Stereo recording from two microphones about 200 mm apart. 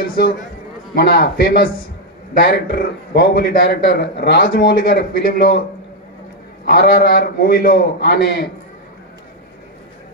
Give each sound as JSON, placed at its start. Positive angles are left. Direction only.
{"t": 0.0, "sound": "a man's voice", "side_deg": 45}
{"t": 6.6, "sound": "a man's voice", "side_deg": 45}